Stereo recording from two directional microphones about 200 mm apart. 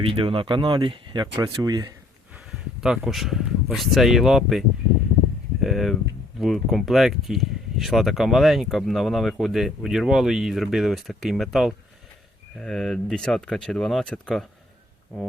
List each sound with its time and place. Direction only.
0.0 s speech: 25° right (ahead or behind)
2.3 s speech: 5° right (ahead or behind)
5.6 s speech: centre (ahead or behind)